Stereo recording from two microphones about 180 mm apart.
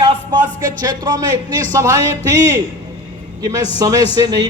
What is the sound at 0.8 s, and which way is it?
A man's voice, 20° right (ahead or behind).